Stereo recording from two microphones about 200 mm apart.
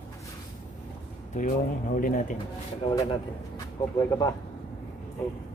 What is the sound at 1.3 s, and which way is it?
Speech, 40° left (ahead or behind).